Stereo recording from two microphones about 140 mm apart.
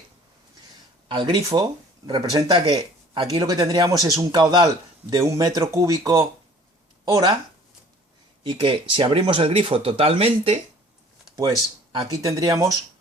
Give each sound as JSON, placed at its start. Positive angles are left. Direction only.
{"t": 1.0, "sound": "speech", "side_deg": -35}
{"t": 8.4, "sound": "speech", "side_deg": -40}
{"t": 11.3, "sound": "speech", "side_deg": -25}